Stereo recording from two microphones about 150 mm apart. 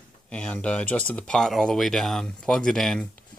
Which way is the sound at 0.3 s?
5° left (ahead or behind).